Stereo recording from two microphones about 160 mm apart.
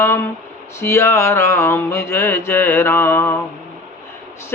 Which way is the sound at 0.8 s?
15° left (ahead or behind).